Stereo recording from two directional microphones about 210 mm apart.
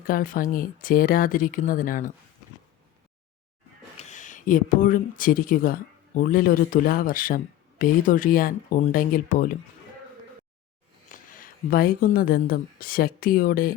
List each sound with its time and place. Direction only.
0.1 s speech: 40° left (ahead or behind)
3.9 s speech: 35° left (ahead or behind)
11.1 s speech: 40° left (ahead or behind)